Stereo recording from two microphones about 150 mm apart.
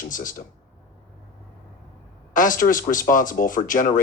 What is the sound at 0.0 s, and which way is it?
Speech, 65° left (ahead or behind).